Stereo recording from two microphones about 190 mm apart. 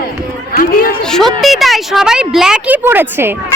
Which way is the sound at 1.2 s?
Centre (ahead or behind).